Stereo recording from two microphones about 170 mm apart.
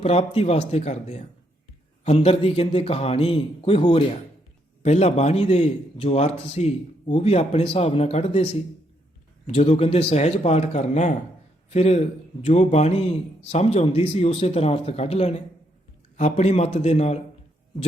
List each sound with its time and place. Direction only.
0.0 s a man's voice: 35° left (ahead or behind)
9.5 s a man's voice: 35° left (ahead or behind)